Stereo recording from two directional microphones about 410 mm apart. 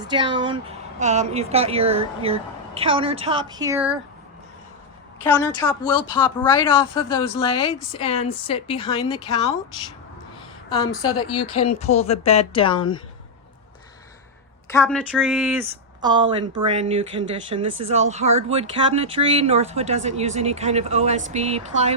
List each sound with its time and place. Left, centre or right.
0.0 s speech: centre
1.8 s a woman's voice: right
2.7 s speech: centre
5.2 s speech: centre
10.7 s speech: centre
11.3 s speech: left
11.7 s speech: centre
14.7 s speech: centre